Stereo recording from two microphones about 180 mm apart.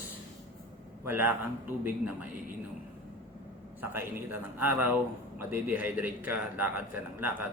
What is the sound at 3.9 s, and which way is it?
A man's voice, 10° right (ahead or behind).